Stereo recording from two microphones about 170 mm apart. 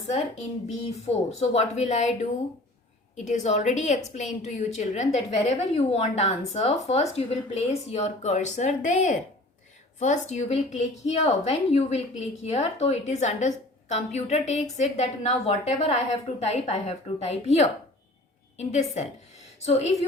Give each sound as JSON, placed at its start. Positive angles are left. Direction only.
{"t": 0.9, "sound": "a woman's voice", "side_deg": 35}
{"t": 3.2, "sound": "a woman's voice", "side_deg": 45}